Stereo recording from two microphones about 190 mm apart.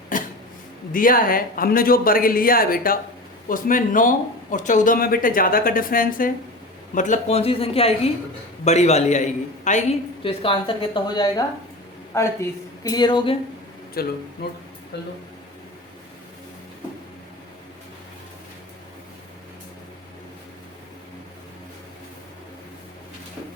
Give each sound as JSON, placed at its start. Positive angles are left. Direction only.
{"t": 0.1, "sound": "a sound", "side_deg": 45}
{"t": 0.9, "sound": "a man's voice", "side_deg": 50}
{"t": 10.2, "sound": "a woman's voice", "side_deg": 30}
{"t": 14.0, "sound": "speech", "side_deg": 55}
{"t": 14.9, "sound": "speech", "side_deg": 65}